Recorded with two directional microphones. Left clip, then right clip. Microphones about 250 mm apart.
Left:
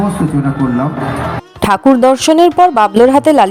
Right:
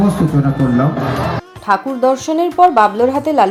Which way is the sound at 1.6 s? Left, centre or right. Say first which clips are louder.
Left 5 dB; left.